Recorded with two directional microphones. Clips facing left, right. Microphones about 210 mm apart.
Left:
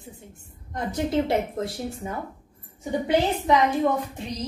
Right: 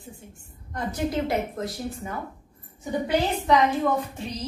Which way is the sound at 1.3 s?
25° left (ahead or behind).